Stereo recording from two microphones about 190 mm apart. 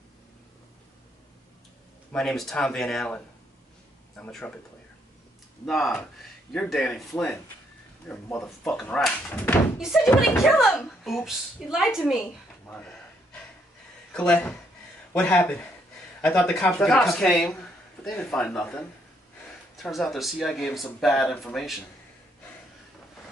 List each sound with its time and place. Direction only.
2.1 s a woman's voice: centre (ahead or behind)
4.2 s a woman's voice: 5° left (ahead or behind)
5.7 s a woman's voice: centre (ahead or behind)
9.8 s speech: centre (ahead or behind)
10.0 s speech: 15° left (ahead or behind)
10.4 s a woman's voice: centre (ahead or behind)
14.1 s a woman's voice: 5° left (ahead or behind)